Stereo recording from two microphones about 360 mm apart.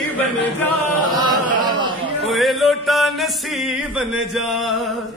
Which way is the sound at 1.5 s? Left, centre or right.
Centre.